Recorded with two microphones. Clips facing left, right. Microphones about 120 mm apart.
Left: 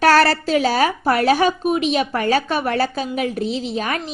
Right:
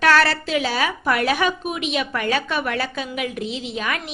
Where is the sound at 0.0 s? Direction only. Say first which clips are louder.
Left 3 dB; 40° left (ahead or behind).